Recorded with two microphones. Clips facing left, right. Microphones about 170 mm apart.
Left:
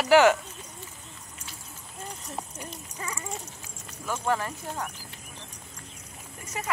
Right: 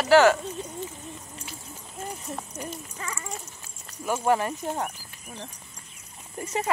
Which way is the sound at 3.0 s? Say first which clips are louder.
Left 3 dB; 15° left (ahead or behind).